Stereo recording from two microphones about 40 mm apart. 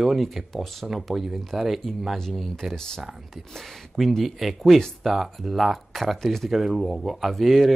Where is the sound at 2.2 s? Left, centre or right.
Centre.